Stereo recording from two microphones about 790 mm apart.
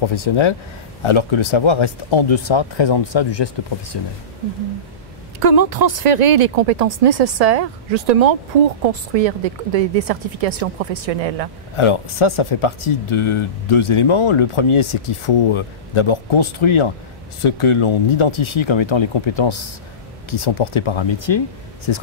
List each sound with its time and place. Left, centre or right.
0.0 s speech: left
5.4 s a woman's voice: right
11.7 s speech: left